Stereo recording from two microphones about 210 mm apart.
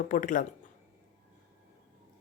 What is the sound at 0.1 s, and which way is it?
Speech, 40° left (ahead or behind).